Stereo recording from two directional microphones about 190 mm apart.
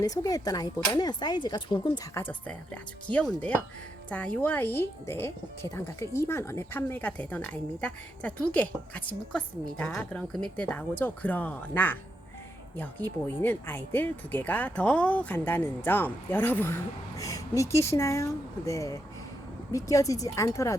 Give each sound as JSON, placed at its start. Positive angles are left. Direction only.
{"t": 0.0, "sound": "speech", "side_deg": 20}
{"t": 3.1, "sound": "speech", "side_deg": 5}